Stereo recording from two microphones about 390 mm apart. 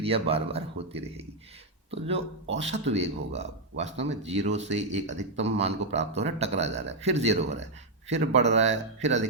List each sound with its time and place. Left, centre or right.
0.0 s a man's voice: centre